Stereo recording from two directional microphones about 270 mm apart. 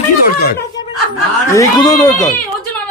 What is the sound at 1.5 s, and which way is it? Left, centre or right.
Speech, centre.